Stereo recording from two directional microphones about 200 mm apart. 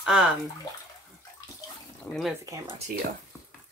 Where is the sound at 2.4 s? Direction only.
15° right (ahead or behind).